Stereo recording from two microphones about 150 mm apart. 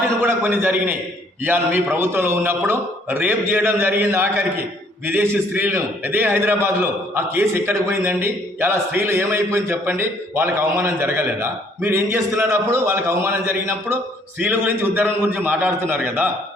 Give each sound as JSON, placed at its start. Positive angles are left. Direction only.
{"t": 0.2, "sound": "a man's voice", "side_deg": -15}